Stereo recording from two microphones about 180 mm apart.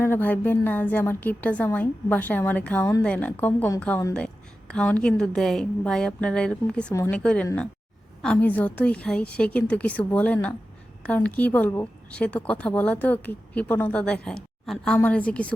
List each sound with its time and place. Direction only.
0.0 s a woman's voice: 10° left (ahead or behind)